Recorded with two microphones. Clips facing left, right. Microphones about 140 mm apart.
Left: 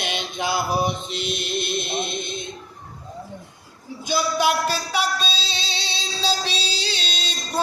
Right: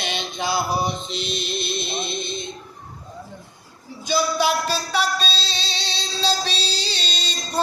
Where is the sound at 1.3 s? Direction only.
55° left (ahead or behind).